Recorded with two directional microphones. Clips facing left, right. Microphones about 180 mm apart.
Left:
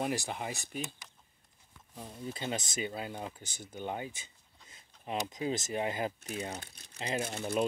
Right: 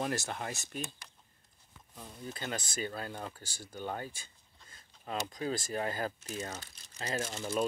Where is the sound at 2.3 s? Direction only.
25° left (ahead or behind).